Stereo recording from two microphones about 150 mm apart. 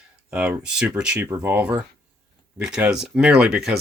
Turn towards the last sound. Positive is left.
turn(degrees=-5)  # may be behind; listen again after turning